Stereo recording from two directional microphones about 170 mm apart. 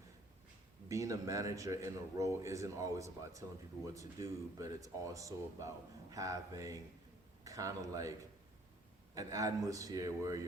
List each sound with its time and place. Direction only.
0.9 s speech: 20° right (ahead or behind)
9.1 s speech: 20° right (ahead or behind)